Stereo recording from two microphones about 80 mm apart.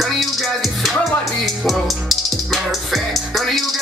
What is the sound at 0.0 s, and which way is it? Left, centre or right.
Music, centre.